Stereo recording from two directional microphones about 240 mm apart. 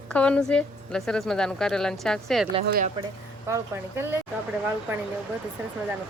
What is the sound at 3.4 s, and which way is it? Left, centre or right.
Speech, centre.